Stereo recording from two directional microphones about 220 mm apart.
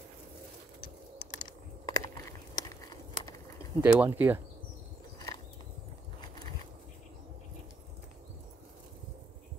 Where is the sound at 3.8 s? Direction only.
10° right (ahead or behind).